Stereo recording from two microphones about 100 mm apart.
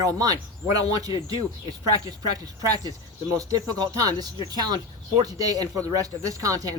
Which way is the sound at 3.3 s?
35° right (ahead or behind).